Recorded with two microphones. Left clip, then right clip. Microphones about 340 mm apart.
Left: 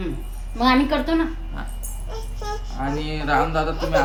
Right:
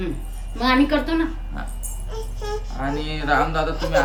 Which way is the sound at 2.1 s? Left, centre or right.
Centre.